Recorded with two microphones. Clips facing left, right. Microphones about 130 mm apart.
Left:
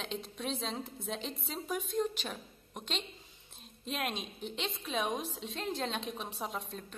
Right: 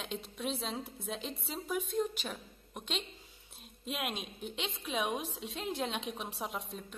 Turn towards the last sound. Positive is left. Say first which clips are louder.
# even
turn(degrees=-5)  # may be behind; listen again after turning